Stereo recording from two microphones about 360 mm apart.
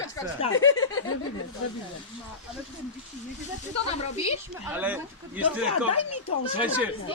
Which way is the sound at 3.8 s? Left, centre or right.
Centre.